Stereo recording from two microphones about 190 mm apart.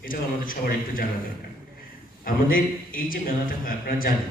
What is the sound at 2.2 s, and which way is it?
A man's voice, 50° left (ahead or behind).